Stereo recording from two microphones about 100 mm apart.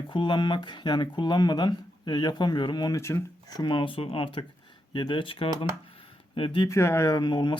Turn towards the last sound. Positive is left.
turn(degrees=50)  # may be behind; listen again after turning